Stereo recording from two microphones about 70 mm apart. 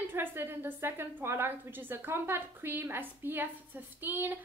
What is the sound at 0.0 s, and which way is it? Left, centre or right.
A woman's voice, right.